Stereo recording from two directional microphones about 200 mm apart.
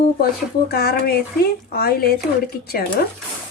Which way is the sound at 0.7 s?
50° left (ahead or behind).